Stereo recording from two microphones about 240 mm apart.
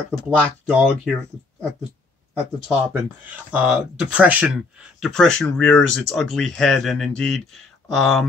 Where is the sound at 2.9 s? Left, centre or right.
Centre.